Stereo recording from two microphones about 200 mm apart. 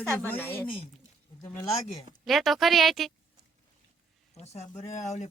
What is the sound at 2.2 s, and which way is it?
Speech, centre (ahead or behind).